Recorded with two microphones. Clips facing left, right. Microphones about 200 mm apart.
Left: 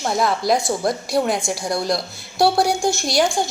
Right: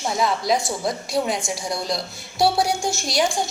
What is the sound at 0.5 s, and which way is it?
Speech, 60° left (ahead or behind).